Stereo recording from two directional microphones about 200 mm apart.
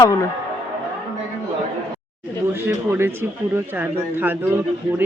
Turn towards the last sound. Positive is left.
turn(degrees=-10)  # may be behind; listen again after turning